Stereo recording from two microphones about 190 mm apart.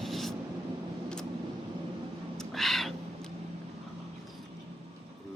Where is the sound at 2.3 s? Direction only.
Centre (ahead or behind).